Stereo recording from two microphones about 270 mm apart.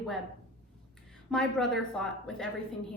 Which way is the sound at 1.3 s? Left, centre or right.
Centre.